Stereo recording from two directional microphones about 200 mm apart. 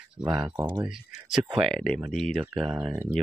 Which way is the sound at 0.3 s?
20° right (ahead or behind).